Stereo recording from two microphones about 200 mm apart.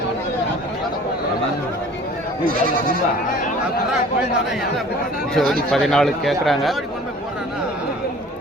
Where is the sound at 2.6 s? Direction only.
45° right (ahead or behind).